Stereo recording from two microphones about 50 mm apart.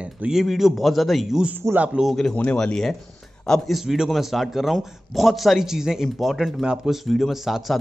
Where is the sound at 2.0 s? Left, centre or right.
Right.